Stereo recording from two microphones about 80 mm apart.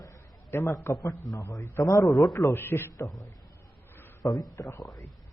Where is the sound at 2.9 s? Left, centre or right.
Left.